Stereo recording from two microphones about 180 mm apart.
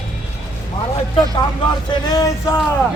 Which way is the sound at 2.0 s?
20° left (ahead or behind).